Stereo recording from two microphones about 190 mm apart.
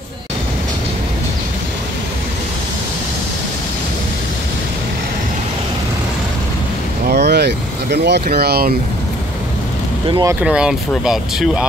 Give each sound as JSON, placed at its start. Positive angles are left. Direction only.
{"t": 7.1, "sound": "vehicle", "side_deg": -60}
{"t": 10.0, "sound": "speech", "side_deg": -25}
{"t": 10.4, "sound": "speech", "side_deg": -5}